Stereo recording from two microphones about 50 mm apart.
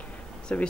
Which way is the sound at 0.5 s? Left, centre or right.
Left.